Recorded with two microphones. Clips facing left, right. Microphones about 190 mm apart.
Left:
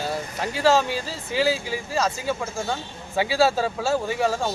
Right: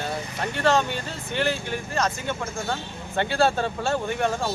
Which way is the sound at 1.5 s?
90° left.